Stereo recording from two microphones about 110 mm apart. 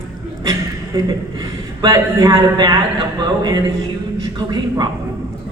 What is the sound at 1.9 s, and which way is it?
Speech, 30° right (ahead or behind).